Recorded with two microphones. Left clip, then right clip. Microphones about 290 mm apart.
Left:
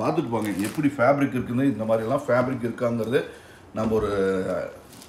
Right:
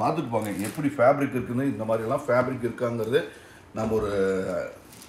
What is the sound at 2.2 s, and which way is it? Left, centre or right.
Speech, centre.